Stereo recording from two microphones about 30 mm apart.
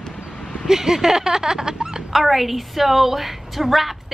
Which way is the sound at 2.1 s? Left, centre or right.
Centre.